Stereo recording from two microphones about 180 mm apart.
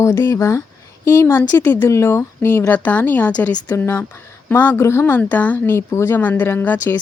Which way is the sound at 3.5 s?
20° left (ahead or behind).